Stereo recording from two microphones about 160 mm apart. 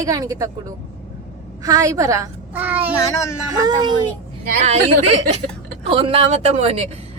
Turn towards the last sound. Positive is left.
turn(degrees=-40)  # may be behind; listen again after turning